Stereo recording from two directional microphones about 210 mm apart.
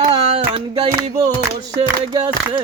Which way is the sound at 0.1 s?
25° right (ahead or behind).